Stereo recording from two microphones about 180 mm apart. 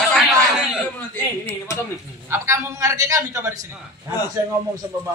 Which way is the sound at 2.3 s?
15° right (ahead or behind).